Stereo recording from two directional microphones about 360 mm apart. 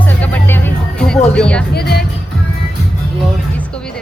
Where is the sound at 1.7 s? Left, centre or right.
Left.